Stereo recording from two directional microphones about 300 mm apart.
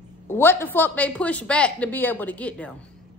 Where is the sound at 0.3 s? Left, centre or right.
Centre.